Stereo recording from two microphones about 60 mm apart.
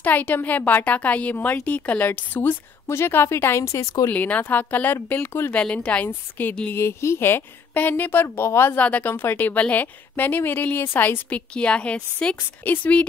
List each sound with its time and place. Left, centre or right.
0.0 s a woman's voice: left
4.1 s a woman's voice: left
5.1 s speech: left
5.5 s a woman's voice: centre
6.0 s speech: left
6.7 s speech: left
8.7 s a woman's voice: left